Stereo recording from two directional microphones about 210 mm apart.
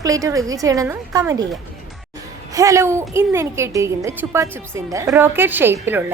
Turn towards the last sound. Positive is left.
turn(degrees=-10)  # may be behind; listen again after turning